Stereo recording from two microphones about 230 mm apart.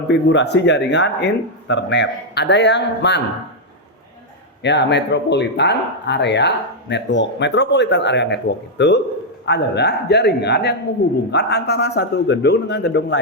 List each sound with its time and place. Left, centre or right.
0.1 s speech: left
4.6 s speech: left